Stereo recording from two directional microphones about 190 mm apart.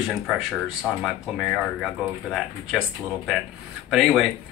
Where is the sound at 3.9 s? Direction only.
Centre (ahead or behind).